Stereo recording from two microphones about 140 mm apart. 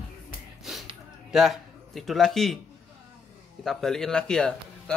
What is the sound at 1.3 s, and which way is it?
A man's voice, centre (ahead or behind).